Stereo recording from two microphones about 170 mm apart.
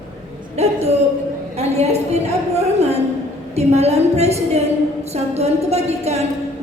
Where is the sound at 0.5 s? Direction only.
40° right (ahead or behind).